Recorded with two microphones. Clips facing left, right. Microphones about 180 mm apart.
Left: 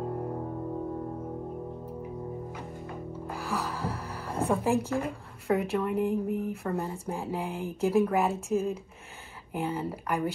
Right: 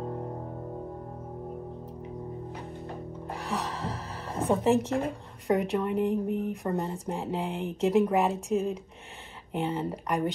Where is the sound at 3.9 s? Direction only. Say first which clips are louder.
Left 1 dB; 30° right (ahead or behind).